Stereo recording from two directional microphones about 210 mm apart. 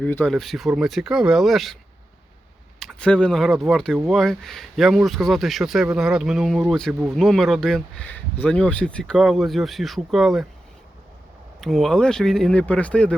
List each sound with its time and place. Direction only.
0.0 s speech: 5° left (ahead or behind)
11.6 s speech: centre (ahead or behind)